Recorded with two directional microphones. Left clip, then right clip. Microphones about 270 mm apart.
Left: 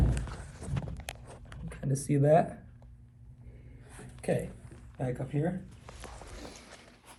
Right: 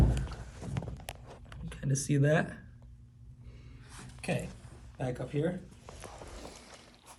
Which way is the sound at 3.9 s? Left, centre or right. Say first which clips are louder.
Even; centre.